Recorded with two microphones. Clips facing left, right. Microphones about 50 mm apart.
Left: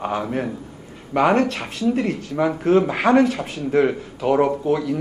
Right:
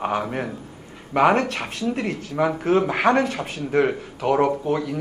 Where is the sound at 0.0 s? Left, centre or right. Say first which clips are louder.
Left 1 dB; centre.